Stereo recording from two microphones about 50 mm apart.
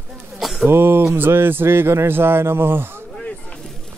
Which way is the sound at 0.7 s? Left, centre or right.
Right.